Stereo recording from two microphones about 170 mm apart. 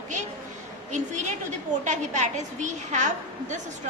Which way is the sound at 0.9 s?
45° right (ahead or behind).